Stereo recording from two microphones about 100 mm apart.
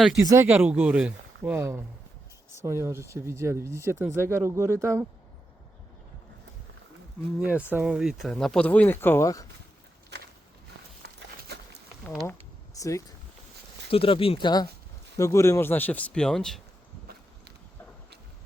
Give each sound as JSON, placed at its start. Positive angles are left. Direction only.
{"t": 0.2, "sound": "speech", "side_deg": -35}
{"t": 0.4, "sound": "speech", "side_deg": -15}
{"t": 1.5, "sound": "speech", "side_deg": -25}
{"t": 7.4, "sound": "speech", "side_deg": -15}
{"t": 7.9, "sound": "speech", "side_deg": -5}
{"t": 8.6, "sound": "speech", "side_deg": 15}
{"t": 13.9, "sound": "speech", "side_deg": 65}
{"t": 15.2, "sound": "speech", "side_deg": 30}